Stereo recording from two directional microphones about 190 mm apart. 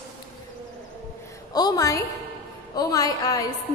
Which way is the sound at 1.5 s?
20° left (ahead or behind).